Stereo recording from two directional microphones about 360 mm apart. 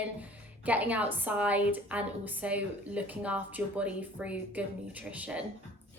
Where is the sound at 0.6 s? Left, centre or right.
Centre.